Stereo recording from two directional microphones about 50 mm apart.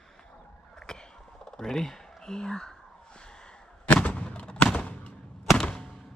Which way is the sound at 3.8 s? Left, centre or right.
Left.